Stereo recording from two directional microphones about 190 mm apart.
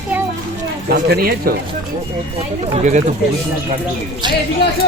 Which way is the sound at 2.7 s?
40° right (ahead or behind).